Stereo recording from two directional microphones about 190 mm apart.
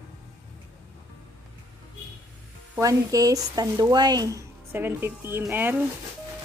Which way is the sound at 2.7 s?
20° right (ahead or behind).